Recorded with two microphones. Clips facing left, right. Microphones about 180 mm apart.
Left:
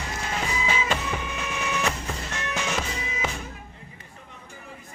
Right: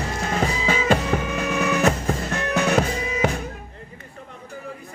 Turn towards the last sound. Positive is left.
turn(degrees=-60)  # may be behind; listen again after turning